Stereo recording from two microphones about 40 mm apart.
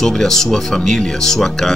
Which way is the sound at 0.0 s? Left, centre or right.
Centre.